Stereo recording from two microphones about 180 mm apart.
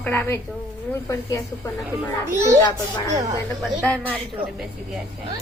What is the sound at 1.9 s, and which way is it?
Speech, 15° right (ahead or behind).